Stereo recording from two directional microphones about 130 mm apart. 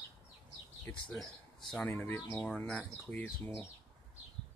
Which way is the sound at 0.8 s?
10° left (ahead or behind).